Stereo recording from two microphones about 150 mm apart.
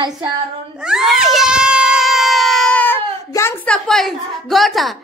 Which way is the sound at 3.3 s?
20° left (ahead or behind).